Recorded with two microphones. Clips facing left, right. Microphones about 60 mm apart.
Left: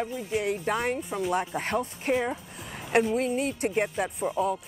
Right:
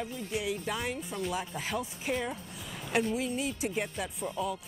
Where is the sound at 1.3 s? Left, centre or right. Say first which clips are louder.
Left 9 dB; left.